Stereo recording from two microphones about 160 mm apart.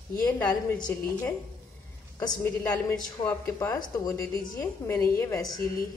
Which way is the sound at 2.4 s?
10° left (ahead or behind).